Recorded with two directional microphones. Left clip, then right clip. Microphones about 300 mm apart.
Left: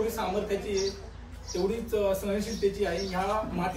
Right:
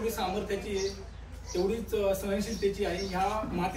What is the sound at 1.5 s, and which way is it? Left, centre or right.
A man's voice, centre.